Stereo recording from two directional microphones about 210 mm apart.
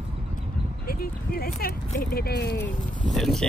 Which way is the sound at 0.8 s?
45° left (ahead or behind).